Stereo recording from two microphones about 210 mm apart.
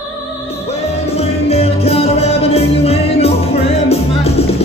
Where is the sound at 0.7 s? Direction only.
30° left (ahead or behind).